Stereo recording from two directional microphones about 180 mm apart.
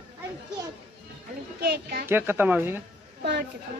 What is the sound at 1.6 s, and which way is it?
Speech, 55° right (ahead or behind).